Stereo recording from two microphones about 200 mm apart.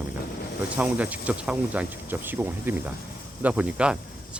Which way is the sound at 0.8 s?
5° right (ahead or behind).